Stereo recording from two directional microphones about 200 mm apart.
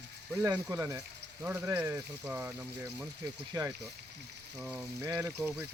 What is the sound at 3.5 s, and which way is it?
Speech, 20° right (ahead or behind).